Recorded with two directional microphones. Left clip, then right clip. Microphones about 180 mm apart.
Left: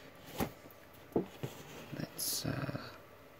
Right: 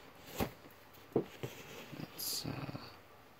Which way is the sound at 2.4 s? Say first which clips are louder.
Left 4 dB; 10° left (ahead or behind).